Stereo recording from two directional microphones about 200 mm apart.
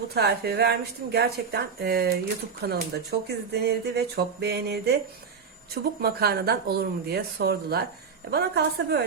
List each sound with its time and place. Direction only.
0.1 s speech: 55° right (ahead or behind)